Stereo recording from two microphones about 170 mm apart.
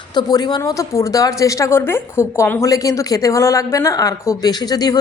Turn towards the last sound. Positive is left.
turn(degrees=25)  # may be behind; listen again after turning